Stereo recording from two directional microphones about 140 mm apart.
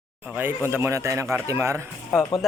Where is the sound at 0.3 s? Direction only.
15° right (ahead or behind).